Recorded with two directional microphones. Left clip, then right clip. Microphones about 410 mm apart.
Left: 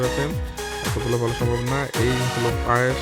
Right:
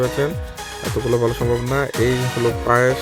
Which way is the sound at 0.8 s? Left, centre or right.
Centre.